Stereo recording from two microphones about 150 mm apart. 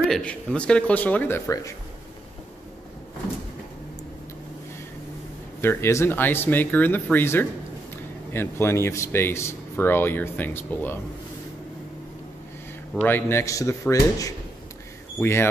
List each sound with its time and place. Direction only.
0.1 s speech: 5° left (ahead or behind)
5.6 s speech: 15° left (ahead or behind)
12.9 s speech: 15° left (ahead or behind)